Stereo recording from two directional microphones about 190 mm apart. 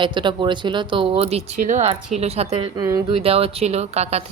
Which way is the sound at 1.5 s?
40° right (ahead or behind).